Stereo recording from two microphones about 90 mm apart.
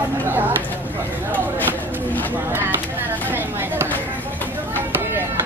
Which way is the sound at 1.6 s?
20° left (ahead or behind).